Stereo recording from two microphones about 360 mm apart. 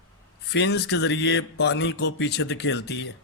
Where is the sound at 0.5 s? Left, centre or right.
Left.